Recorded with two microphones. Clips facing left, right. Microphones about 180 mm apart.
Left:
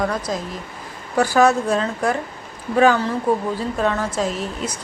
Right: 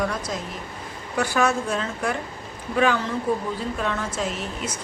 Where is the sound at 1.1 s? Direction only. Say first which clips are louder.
Left 6 dB; 35° left (ahead or behind).